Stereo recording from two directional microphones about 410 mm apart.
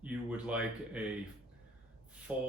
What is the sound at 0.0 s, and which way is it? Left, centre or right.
Speech, centre.